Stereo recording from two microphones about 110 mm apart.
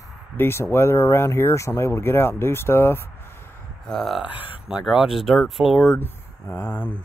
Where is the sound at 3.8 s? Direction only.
Centre (ahead or behind).